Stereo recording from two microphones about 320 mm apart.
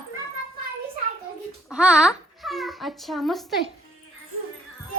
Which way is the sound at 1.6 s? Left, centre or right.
Centre.